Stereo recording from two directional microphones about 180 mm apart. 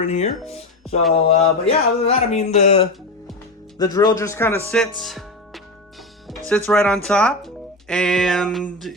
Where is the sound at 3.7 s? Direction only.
20° left (ahead or behind); by 5.2 s centre (ahead or behind).